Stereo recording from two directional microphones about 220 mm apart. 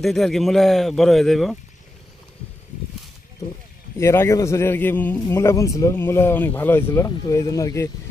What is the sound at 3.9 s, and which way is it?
Speech, 10° left (ahead or behind).